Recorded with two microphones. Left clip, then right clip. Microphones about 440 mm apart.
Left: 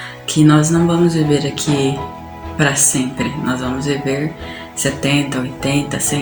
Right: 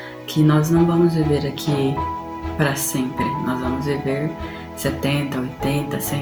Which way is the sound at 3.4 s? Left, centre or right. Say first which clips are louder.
Left 3 dB; right.